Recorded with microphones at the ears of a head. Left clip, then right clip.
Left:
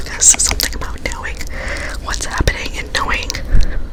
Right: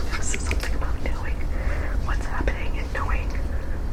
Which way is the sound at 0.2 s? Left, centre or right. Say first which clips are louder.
Left 16 dB; left.